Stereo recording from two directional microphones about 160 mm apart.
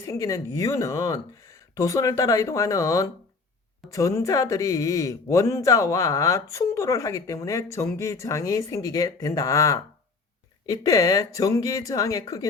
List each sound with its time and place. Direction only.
0.0 s speech: 20° left (ahead or behind)